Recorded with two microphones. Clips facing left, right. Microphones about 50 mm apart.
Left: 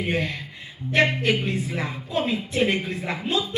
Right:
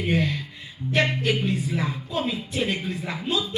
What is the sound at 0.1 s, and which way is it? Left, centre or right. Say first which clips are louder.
Speech: right 2 dB; left.